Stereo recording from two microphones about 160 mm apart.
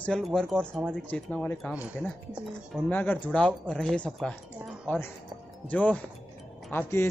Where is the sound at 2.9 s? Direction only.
10° left (ahead or behind).